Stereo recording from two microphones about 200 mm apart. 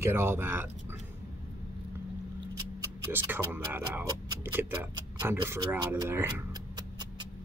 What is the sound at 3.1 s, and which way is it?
Speech, 10° right (ahead or behind).